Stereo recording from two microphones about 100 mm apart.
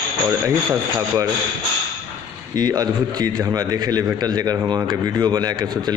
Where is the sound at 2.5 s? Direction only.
40° right (ahead or behind).